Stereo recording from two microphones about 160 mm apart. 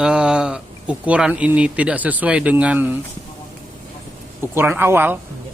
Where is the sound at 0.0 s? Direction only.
5° right (ahead or behind).